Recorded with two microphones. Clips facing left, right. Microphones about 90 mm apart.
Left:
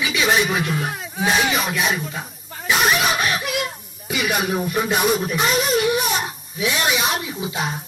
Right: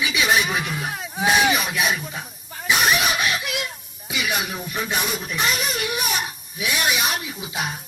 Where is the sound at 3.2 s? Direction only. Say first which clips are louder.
Left 3 dB; 50° left (ahead or behind).